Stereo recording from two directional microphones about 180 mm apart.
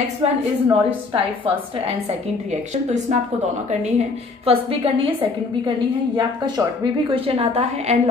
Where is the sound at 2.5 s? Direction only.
40° right (ahead or behind).